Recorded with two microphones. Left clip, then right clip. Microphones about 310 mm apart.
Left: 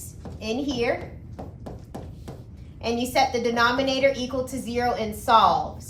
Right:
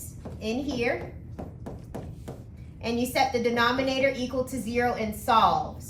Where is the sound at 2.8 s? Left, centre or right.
Centre.